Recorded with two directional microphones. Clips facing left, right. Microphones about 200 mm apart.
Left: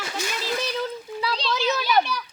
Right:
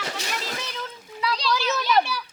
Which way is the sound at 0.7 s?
35° left (ahead or behind).